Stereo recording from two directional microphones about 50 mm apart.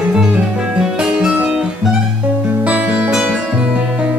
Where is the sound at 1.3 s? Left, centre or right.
Right.